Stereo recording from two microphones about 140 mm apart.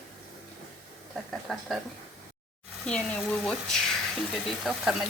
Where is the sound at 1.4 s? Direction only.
Centre (ahead or behind).